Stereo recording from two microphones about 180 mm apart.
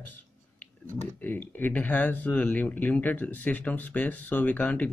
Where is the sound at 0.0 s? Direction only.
10° left (ahead or behind).